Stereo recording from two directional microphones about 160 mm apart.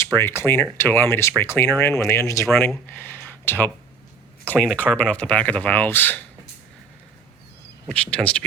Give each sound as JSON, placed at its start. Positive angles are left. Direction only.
{"t": 0.0, "sound": "speech", "side_deg": 15}
{"t": 7.9, "sound": "speech", "side_deg": 5}